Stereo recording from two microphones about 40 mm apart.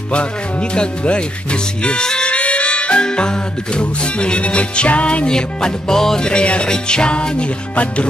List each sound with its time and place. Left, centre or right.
0.1 s speech: left
2.2 s music: left
6.7 s speech: left